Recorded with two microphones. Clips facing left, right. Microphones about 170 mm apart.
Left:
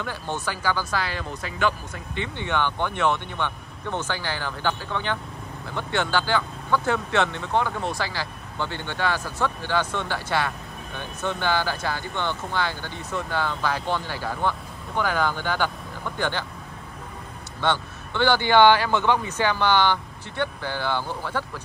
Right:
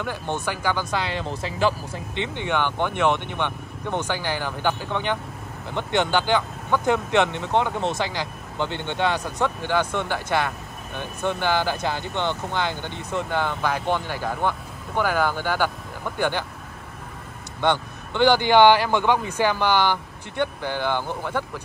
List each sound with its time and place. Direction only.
0.0 s speech: 15° right (ahead or behind); by 2.0 s 30° right (ahead or behind)
2.1 s speech: 15° right (ahead or behind)
17.6 s speech: 15° right (ahead or behind)